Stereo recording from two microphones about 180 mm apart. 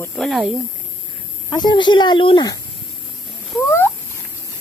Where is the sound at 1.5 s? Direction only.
25° left (ahead or behind).